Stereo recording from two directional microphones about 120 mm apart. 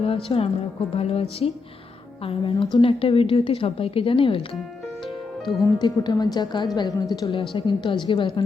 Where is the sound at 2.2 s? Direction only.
45° left (ahead or behind).